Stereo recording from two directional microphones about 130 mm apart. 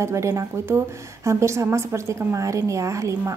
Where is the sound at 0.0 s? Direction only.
20° right (ahead or behind).